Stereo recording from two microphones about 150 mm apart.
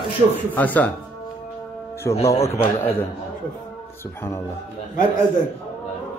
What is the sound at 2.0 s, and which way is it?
Speech, 20° left (ahead or behind).